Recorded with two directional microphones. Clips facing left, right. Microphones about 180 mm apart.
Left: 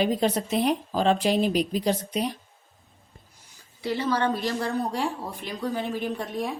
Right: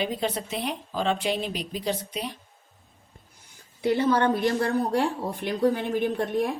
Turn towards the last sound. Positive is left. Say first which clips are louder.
# right 4 dB
turn(degrees=-55)  # may be behind; listen again after turning